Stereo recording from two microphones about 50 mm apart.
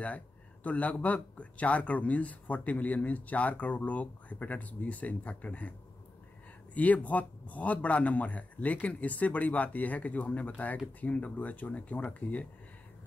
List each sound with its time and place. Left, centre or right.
0.7 s a man's voice: left